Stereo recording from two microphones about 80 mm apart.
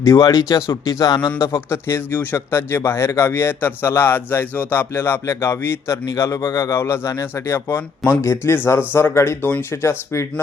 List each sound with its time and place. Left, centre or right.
0.2 s speech: left
1.5 s a man's voice: left